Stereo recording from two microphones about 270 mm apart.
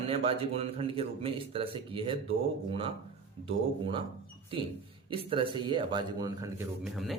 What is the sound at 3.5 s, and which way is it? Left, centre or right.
Speech, centre.